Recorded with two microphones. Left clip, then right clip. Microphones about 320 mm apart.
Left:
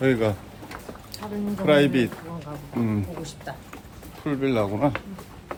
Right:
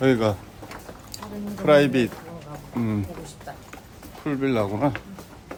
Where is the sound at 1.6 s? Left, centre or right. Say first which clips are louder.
Right 2 dB; centre.